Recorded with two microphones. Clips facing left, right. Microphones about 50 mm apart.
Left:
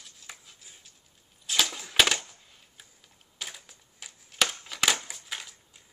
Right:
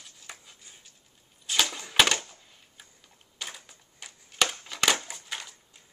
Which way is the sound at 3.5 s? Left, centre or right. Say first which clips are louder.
Right 2 dB; centre.